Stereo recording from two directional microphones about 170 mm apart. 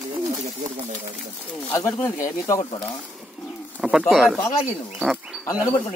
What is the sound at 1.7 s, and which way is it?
Speech, 15° left (ahead or behind).